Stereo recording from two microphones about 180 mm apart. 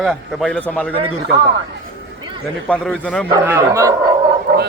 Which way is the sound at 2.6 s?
5° left (ahead or behind).